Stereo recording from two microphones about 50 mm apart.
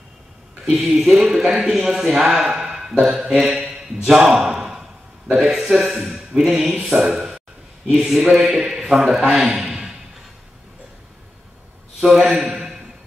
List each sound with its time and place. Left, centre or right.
0.7 s speech: centre
2.7 s a sound: centre
3.3 s a man's voice: centre
6.8 s a sound: centre
8.0 s a man's voice: centre
12.0 s a man's voice: centre